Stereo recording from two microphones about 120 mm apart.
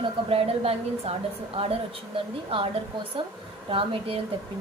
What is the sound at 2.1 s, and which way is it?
A woman's voice, 45° right (ahead or behind).